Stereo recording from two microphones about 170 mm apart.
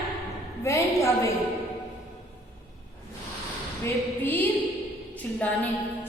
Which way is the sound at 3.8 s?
10° left (ahead or behind).